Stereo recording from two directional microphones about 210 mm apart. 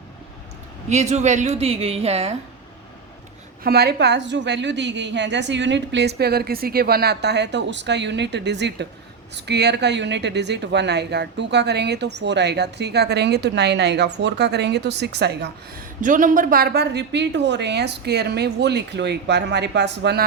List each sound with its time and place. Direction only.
0.9 s a woman's voice: 30° right (ahead or behind)
3.6 s a woman's voice: 50° right (ahead or behind)